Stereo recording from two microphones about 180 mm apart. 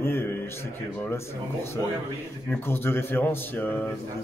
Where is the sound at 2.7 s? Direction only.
10° left (ahead or behind).